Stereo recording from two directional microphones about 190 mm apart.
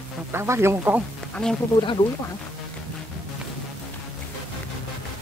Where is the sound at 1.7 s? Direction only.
25° left (ahead or behind).